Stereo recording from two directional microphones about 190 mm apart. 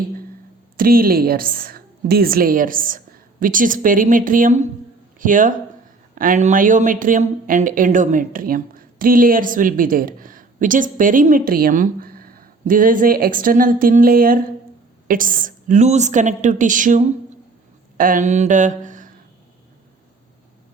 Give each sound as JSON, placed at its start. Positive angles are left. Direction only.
{"t": 0.8, "sound": "a woman's voice", "side_deg": -50}